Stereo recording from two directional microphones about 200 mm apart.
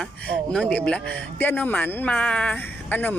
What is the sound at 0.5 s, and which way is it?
Speech, 5° left (ahead or behind).